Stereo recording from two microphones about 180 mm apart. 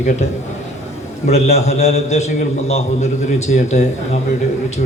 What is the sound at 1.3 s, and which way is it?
A man's voice, 35° left (ahead or behind).